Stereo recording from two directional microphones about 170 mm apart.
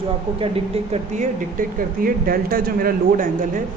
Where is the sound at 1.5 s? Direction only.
55° right (ahead or behind).